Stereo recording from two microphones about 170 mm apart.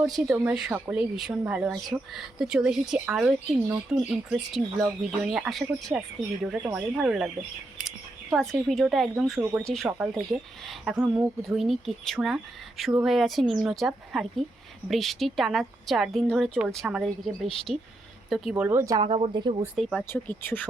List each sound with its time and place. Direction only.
0.0 s speech: 5° right (ahead or behind)
10.9 s speech: 10° right (ahead or behind)
11.4 s speech: centre (ahead or behind)
18.9 s speech: 30° right (ahead or behind)
19.6 s speech: centre (ahead or behind)